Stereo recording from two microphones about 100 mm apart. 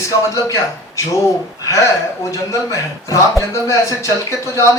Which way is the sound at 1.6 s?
30° left (ahead or behind).